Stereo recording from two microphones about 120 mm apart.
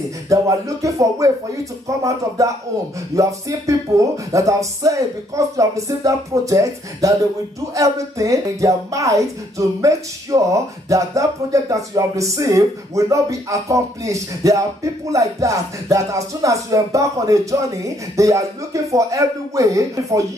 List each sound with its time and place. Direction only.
0.3 s speech: 25° right (ahead or behind)